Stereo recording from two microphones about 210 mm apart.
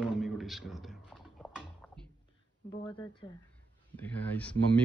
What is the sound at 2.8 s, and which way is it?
Speech, 20° left (ahead or behind).